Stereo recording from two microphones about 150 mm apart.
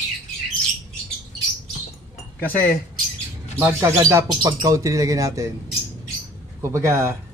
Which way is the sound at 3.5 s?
15° right (ahead or behind).